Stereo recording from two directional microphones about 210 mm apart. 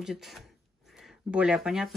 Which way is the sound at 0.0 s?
Centre (ahead or behind).